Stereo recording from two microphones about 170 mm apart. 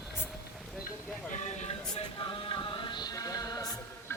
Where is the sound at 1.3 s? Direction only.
45° left (ahead or behind); by 3.7 s 20° left (ahead or behind).